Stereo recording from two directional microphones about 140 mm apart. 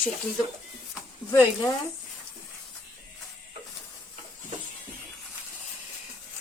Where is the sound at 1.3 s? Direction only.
20° left (ahead or behind).